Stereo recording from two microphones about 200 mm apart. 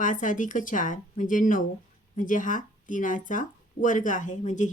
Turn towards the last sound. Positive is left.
turn(degrees=40)  # may be behind; listen again after turning